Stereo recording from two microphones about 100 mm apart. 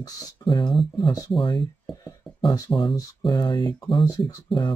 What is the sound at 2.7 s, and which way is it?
Speech, 55° left (ahead or behind).